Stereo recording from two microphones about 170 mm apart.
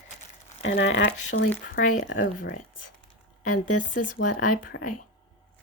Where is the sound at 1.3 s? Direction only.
70° left (ahead or behind).